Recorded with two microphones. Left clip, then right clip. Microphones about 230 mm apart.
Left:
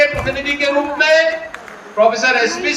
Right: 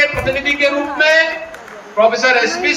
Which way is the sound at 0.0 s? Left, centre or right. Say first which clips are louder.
Right 1 dB; centre.